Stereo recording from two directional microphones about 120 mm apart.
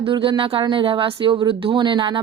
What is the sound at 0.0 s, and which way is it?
Speech, 45° right (ahead or behind).